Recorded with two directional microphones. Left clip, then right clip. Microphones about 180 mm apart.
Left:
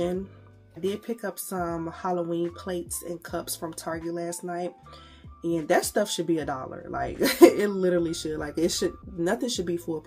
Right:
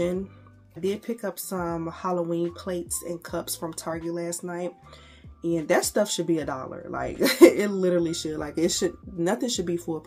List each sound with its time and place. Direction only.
0.7 s speech: 10° right (ahead or behind)